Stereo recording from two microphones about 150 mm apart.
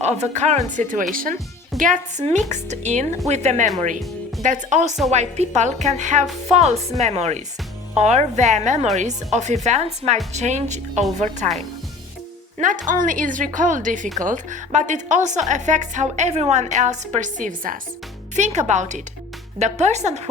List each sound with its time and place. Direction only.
0.0 s a woman's voice: 50° right (ahead or behind)
1.1 s speech: 65° right (ahead or behind)
1.8 s a woman's voice: 55° right (ahead or behind)
12.5 s a woman's voice: 60° right (ahead or behind)